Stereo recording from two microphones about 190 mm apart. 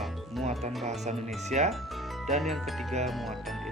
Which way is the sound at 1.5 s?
35° right (ahead or behind).